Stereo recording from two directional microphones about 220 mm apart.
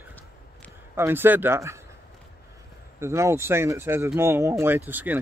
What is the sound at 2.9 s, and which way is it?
Speech, 15° right (ahead or behind).